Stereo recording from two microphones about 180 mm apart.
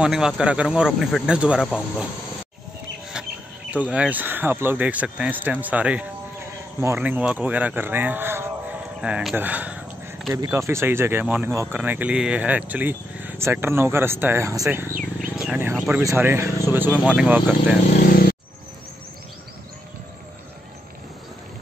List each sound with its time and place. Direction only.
0.0 s speech: 5° right (ahead or behind)
3.9 s a man's voice: 10° right (ahead or behind)
15.1 s speech: 5° right (ahead or behind)